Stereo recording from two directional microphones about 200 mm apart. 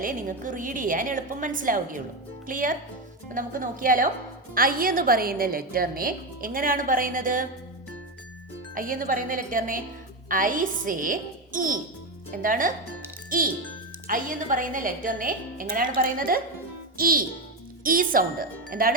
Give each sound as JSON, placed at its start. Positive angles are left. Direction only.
{"t": 0.0, "sound": "a woman's voice", "side_deg": -40}
{"t": 8.7, "sound": "a woman's voice", "side_deg": -45}